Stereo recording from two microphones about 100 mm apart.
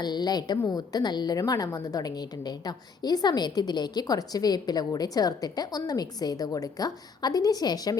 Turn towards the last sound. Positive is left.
turn(degrees=40)  # may be behind; listen again after turning